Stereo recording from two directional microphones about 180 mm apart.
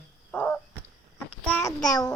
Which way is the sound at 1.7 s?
5° left (ahead or behind).